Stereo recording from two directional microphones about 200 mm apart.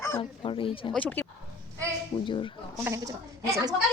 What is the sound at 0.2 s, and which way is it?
Speech, 25° left (ahead or behind).